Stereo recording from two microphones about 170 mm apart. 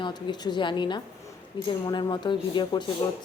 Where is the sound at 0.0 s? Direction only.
25° left (ahead or behind).